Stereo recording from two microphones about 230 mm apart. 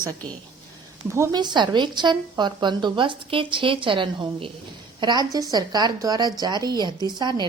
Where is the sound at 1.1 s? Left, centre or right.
Centre.